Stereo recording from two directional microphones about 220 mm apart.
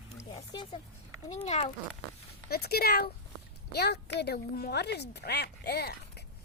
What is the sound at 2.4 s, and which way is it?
Speech, 45° left (ahead or behind).